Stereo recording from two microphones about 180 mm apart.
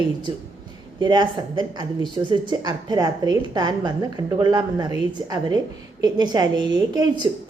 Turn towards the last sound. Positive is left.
turn(degrees=-25)  # may be behind; listen again after turning